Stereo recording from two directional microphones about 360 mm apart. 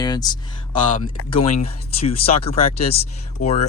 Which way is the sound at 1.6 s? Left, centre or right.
Centre.